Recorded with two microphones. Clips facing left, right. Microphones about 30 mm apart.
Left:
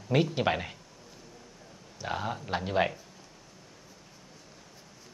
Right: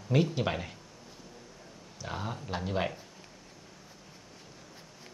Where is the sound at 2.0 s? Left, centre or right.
Centre.